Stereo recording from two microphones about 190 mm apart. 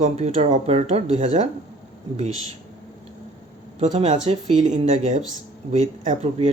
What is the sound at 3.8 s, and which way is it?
Speech, 35° right (ahead or behind).